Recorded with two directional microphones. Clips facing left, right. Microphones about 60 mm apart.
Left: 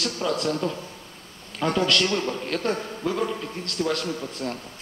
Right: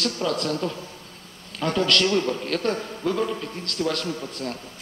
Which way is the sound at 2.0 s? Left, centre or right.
Centre.